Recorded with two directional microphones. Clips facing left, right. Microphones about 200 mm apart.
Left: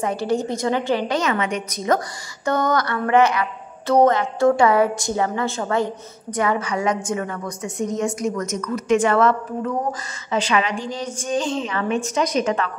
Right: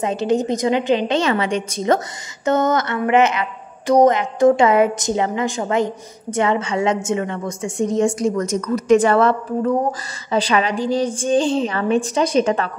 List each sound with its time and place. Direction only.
0.0 s a woman's voice: 20° right (ahead or behind)